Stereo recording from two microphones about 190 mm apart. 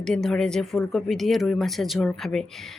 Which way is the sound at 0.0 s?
5° left (ahead or behind).